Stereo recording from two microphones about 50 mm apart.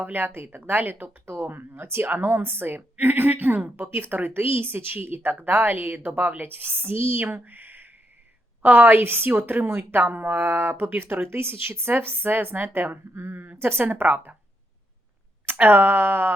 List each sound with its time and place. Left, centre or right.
0.0 s speech: right
1.2 s speech: right
15.6 s speech: right